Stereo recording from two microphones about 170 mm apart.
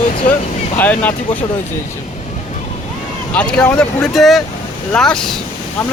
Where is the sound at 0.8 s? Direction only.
10° left (ahead or behind).